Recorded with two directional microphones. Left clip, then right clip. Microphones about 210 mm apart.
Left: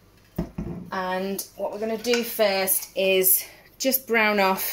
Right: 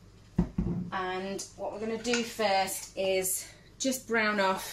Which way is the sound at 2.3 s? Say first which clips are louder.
Left 5 dB; 45° left (ahead or behind).